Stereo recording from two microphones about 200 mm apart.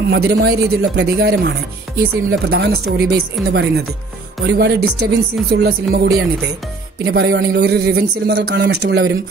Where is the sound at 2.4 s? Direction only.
55° right (ahead or behind).